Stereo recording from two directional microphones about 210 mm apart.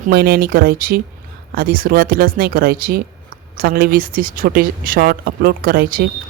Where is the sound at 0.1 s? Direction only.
45° right (ahead or behind).